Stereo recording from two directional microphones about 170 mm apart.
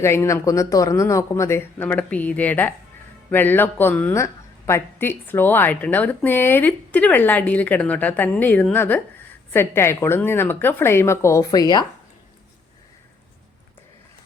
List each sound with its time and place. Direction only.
0.0 s speech: 15° left (ahead or behind)